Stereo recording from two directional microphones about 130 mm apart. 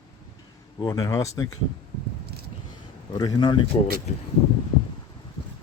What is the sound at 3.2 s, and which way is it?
Speech, 35° left (ahead or behind).